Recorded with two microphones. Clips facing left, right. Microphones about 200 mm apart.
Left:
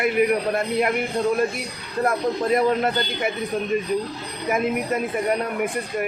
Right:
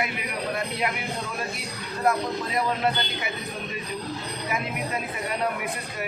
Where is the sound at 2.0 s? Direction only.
50° left (ahead or behind).